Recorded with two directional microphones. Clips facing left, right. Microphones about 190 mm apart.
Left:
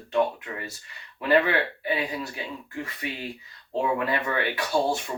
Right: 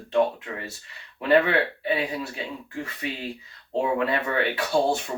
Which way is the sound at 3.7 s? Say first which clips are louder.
Right 2 dB; 25° right (ahead or behind).